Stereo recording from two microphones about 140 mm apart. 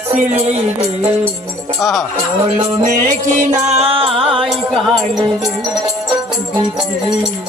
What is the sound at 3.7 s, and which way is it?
Music, 45° right (ahead or behind).